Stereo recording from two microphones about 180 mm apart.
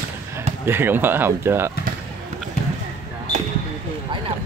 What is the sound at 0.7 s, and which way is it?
Speech, 10° right (ahead or behind).